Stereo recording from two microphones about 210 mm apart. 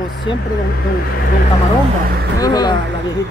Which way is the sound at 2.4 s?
20° left (ahead or behind).